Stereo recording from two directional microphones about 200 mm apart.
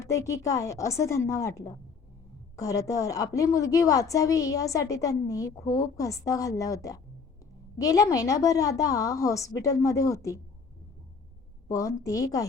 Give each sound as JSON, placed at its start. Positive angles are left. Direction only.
{"t": 0.0, "sound": "a woman's voice", "side_deg": 15}
{"t": 11.7, "sound": "a woman's voice", "side_deg": 15}